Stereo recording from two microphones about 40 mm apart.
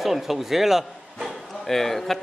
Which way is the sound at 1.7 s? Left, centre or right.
Centre.